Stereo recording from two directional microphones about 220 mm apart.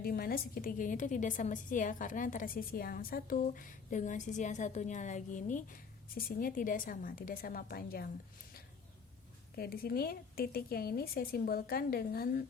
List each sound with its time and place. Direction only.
0.0 s a woman's voice: 45° left (ahead or behind)
9.6 s a woman's voice: 45° left (ahead or behind)